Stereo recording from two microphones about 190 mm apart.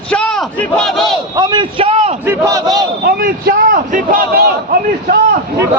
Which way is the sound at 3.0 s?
50° right (ahead or behind).